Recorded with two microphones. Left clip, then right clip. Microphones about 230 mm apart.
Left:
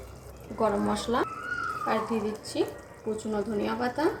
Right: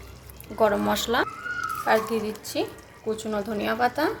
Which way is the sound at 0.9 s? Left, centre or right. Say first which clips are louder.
Right 4 dB; right.